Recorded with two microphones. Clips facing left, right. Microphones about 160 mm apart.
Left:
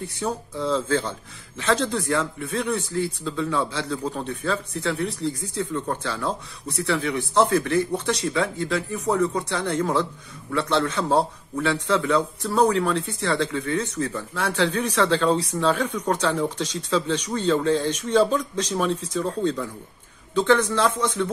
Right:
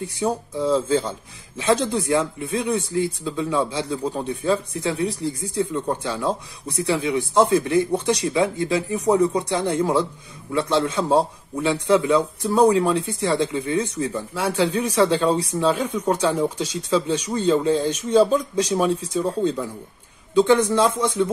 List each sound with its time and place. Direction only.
0.2 s a man's voice: 10° right (ahead or behind)